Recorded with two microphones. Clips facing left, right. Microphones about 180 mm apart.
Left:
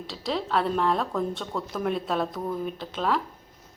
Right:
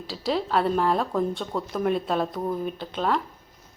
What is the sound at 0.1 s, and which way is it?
Speech, centre (ahead or behind).